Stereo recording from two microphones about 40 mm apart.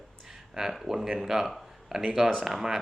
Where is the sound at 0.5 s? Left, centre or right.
Centre.